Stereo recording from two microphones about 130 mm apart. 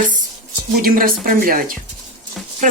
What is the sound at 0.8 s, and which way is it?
Speech, 90° right.